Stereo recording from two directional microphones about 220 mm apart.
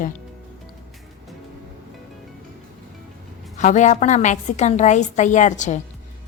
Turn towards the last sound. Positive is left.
turn(degrees=35)  # may be behind; listen again after turning